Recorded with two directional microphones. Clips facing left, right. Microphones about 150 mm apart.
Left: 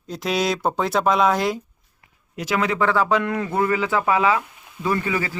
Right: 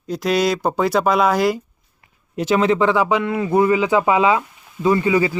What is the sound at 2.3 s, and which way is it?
A man's voice, 25° right (ahead or behind).